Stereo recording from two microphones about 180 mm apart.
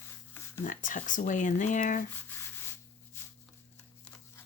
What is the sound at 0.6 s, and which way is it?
Speech, 45° left (ahead or behind).